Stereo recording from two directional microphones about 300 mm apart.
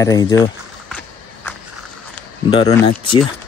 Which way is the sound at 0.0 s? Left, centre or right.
Centre.